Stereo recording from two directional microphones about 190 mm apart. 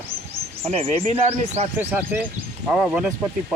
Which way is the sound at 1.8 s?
10° right (ahead or behind).